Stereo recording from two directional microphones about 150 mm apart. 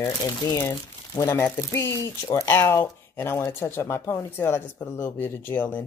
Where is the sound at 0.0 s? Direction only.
25° left (ahead or behind).